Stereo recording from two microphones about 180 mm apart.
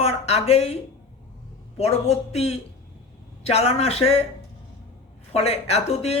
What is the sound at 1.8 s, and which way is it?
Speech, 35° left (ahead or behind).